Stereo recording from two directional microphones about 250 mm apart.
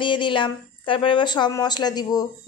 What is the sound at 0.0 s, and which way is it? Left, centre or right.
Speech, centre.